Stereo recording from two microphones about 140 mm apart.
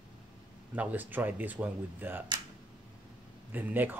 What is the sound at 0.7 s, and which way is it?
Speech, 10° right (ahead or behind).